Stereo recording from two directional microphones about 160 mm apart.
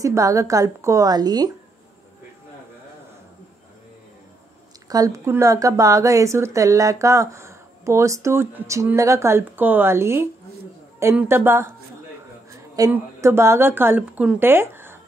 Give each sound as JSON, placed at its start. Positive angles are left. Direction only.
{"t": 0.0, "sound": "speech", "side_deg": -20}
{"t": 4.8, "sound": "speech", "side_deg": -20}
{"t": 12.4, "sound": "a sound", "side_deg": -20}
{"t": 12.9, "sound": "speech", "side_deg": -15}